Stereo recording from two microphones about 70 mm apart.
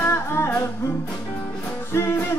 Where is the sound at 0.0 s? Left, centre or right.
Left.